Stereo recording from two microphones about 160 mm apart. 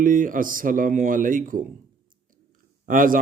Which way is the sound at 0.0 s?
55° right (ahead or behind).